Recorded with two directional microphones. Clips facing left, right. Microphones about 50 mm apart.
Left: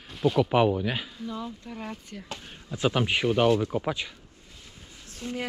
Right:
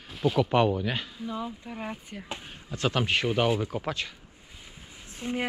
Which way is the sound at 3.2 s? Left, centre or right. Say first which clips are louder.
Left 3 dB; centre.